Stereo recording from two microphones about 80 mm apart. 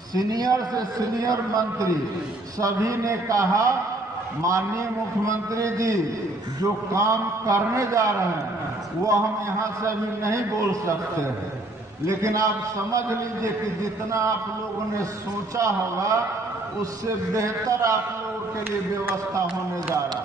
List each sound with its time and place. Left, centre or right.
0.1 s a man's voice: right
9.6 s a man's voice: right
12.1 s a man's voice: right
15.5 s a man's voice: right
17.3 s a man's voice: right